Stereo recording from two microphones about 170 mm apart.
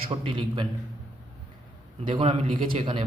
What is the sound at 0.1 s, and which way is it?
Speech, 30° right (ahead or behind).